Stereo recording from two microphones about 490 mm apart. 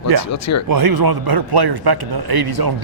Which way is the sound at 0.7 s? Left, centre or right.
Right.